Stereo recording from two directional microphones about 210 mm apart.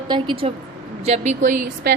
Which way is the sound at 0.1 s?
25° right (ahead or behind).